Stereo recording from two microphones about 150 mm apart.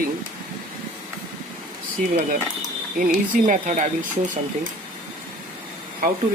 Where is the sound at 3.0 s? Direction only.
65° right (ahead or behind).